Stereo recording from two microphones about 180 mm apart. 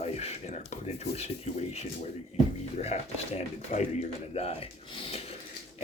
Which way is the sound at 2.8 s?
35° left (ahead or behind).